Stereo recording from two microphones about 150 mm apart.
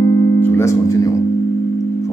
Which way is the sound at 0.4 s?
15° left (ahead or behind).